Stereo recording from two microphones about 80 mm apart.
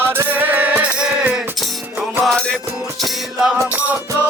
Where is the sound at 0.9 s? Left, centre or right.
Centre.